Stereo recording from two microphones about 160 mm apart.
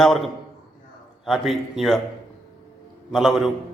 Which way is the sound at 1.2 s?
Centre (ahead or behind).